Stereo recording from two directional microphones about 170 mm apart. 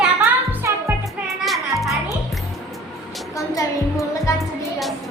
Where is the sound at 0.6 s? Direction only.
15° right (ahead or behind).